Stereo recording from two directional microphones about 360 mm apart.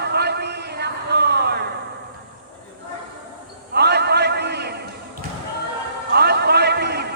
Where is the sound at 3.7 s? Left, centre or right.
Right.